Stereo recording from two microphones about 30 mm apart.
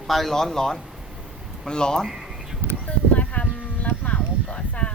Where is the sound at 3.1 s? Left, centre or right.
Left.